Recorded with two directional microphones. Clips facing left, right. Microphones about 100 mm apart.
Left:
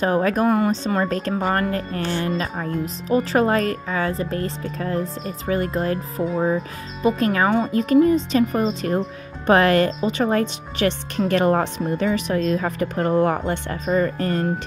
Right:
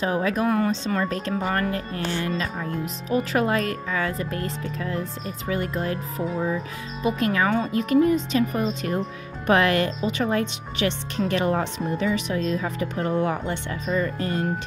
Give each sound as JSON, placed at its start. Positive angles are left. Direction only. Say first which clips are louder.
{"t": 0.0, "sound": "speech", "louder": "left 4 dB", "side_deg": 45}